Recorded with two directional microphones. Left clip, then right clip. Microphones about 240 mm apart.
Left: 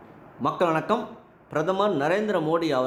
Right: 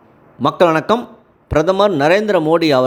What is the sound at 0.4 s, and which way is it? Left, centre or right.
A man's voice, right.